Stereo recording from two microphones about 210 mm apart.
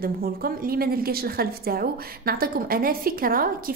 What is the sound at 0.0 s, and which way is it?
A woman's voice, 45° right (ahead or behind).